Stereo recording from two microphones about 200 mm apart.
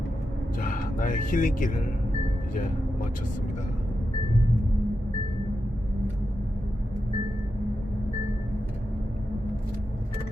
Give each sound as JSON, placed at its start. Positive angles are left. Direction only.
{"t": 0.6, "sound": "speech", "side_deg": 40}